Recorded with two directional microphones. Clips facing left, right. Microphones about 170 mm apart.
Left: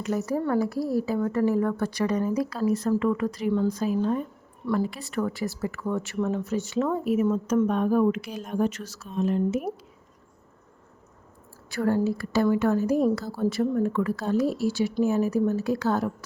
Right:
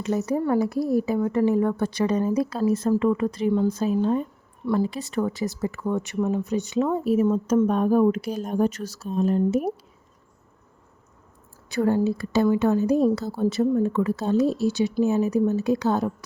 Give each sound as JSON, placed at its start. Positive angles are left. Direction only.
{"t": 0.0, "sound": "a woman's voice", "side_deg": -20}
{"t": 7.0, "sound": "speech", "side_deg": -30}
{"t": 11.7, "sound": "a woman's voice", "side_deg": -20}